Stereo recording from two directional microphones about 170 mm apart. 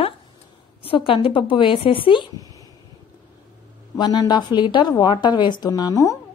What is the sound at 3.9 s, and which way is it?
A woman's voice, 25° left (ahead or behind).